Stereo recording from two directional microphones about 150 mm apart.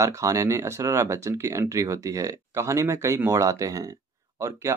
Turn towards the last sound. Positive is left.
turn(degrees=-20)  # may be behind; listen again after turning